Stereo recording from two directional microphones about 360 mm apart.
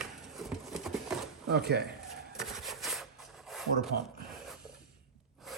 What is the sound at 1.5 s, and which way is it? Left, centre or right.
Speech, right.